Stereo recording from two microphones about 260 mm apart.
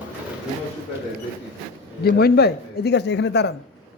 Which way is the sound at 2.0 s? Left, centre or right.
Left.